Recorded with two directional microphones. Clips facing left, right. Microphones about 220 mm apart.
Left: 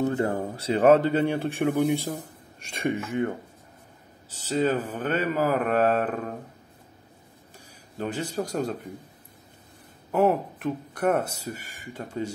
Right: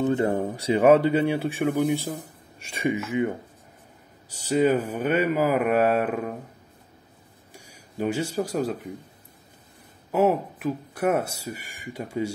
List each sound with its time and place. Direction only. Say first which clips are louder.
0.0 s speech: right 2 dB; 20° right (ahead or behind)
0.7 s speech: right 1 dB; 10° right (ahead or behind)
4.3 s speech: right 4 dB; 15° right (ahead or behind)
7.5 s speech: right 4 dB; 10° right (ahead or behind)
10.1 s speech: right 1 dB; 5° right (ahead or behind)